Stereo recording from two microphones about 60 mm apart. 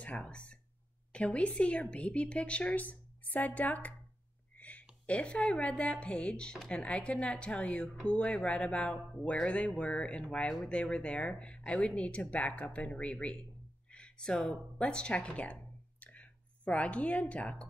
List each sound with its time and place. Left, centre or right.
0.0 s a woman's voice: left